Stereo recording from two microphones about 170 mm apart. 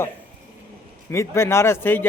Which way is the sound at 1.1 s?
15° left (ahead or behind).